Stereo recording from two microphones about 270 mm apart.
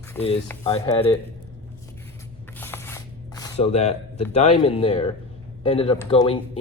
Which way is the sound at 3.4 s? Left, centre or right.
Left.